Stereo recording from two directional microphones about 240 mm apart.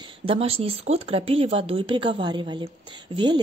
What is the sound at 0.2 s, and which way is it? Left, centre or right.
Speech, right.